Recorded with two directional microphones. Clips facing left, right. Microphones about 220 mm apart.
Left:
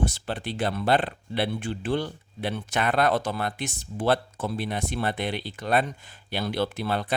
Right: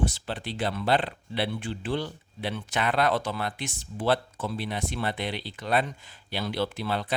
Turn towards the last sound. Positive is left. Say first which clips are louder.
# left 2 dB
turn(degrees=50)  # may be behind; listen again after turning